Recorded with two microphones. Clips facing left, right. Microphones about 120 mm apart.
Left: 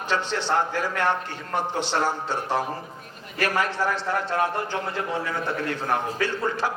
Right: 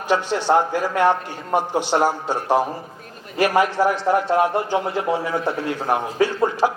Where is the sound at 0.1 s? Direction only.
15° right (ahead or behind).